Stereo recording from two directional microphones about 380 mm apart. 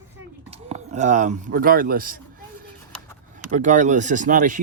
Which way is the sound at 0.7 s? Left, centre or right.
Centre.